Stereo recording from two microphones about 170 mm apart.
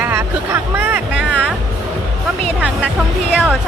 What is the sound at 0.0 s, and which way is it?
Music, 15° right (ahead or behind).